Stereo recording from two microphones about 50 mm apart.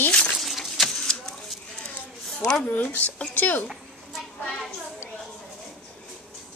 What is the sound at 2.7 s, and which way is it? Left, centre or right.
Speech, left.